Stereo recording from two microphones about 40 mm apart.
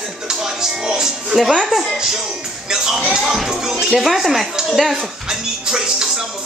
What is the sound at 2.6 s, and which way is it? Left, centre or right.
Speech, centre.